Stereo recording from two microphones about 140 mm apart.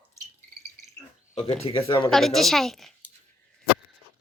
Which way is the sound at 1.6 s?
40° left (ahead or behind).